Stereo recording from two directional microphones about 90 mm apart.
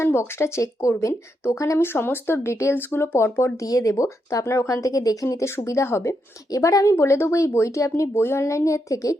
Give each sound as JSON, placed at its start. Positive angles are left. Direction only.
{"t": 0.0, "sound": "speech", "side_deg": 30}